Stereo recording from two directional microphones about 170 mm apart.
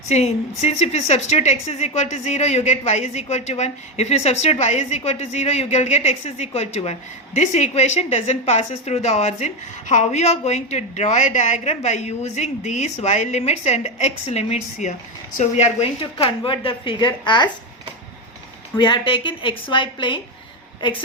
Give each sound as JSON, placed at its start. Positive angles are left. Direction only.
{"t": 0.1, "sound": "a woman's voice", "side_deg": 40}
{"t": 18.8, "sound": "a woman's voice", "side_deg": 30}